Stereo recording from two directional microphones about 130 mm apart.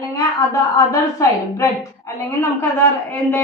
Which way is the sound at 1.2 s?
25° left (ahead or behind).